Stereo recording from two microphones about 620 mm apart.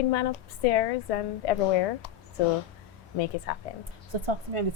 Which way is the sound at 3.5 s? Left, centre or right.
Left.